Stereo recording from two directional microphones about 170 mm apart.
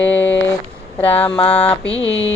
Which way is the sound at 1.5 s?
10° left (ahead or behind).